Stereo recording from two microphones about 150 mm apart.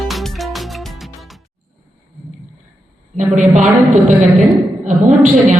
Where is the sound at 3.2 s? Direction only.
55° right (ahead or behind).